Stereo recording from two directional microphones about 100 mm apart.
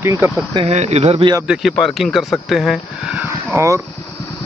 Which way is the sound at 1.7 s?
Centre (ahead or behind).